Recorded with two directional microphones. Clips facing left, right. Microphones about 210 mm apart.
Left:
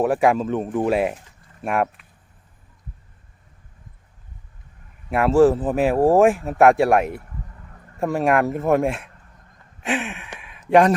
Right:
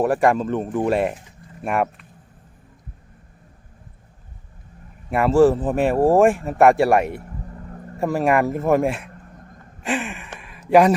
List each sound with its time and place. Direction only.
0.0 s speech: centre (ahead or behind)
5.1 s speech: centre (ahead or behind)
7.4 s vehicle: 40° right (ahead or behind)
7.9 s speech: centre (ahead or behind)
9.3 s a sound: 50° right (ahead or behind)
9.8 s speech: centre (ahead or behind)
10.3 s a sound: centre (ahead or behind)